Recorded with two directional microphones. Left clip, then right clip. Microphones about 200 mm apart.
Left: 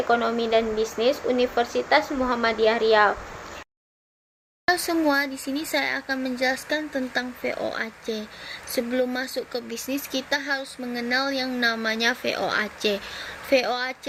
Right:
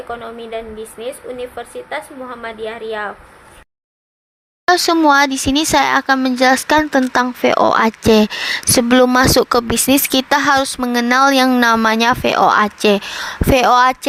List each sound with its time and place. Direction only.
0.1 s a woman's voice: centre (ahead or behind)
4.6 s speech: 50° right (ahead or behind)